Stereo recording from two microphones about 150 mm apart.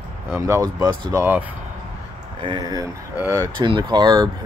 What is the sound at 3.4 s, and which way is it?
Speech, 30° right (ahead or behind).